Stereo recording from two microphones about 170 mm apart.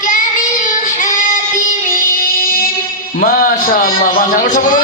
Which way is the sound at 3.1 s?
55° left (ahead or behind).